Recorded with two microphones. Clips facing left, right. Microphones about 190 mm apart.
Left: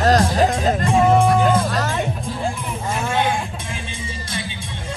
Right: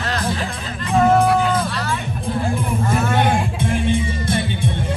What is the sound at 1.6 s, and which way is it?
Music, 45° left (ahead or behind).